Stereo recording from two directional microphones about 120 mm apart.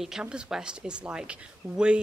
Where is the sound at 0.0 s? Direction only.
5° right (ahead or behind).